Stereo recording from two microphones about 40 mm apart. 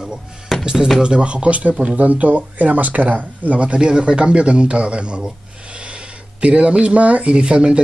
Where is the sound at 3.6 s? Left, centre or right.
Right.